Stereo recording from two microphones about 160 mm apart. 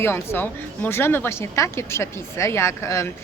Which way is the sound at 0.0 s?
15° left (ahead or behind).